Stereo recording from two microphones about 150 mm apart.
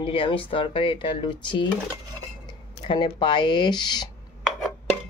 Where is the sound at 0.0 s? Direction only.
35° left (ahead or behind).